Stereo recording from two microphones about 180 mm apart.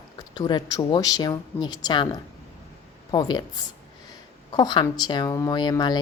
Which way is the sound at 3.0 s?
25° left (ahead or behind).